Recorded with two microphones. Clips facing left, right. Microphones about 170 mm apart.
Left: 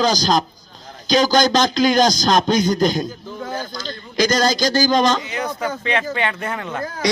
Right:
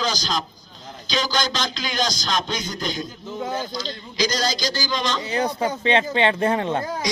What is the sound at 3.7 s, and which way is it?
A man's voice, 50° left (ahead or behind).